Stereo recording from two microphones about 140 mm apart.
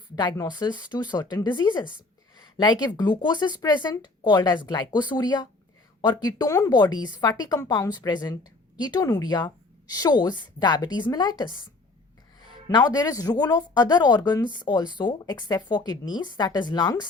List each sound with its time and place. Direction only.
0.2 s speech: 30° left (ahead or behind)
12.6 s speech: 30° left (ahead or behind)